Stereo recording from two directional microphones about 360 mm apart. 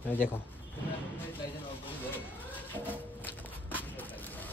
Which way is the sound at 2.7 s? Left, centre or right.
Centre.